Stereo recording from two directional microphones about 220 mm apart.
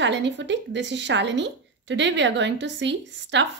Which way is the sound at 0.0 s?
55° right (ahead or behind).